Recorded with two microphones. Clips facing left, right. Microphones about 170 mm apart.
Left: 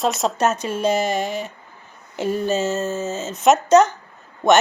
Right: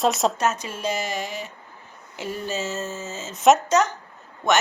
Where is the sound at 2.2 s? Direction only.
55° left (ahead or behind).